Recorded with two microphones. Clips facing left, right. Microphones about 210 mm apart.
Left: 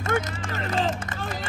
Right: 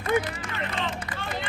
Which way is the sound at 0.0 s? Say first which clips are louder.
Right 1 dB; 45° left (ahead or behind).